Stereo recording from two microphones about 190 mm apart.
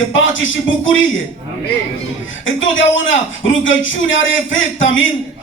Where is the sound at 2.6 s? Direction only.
85° left.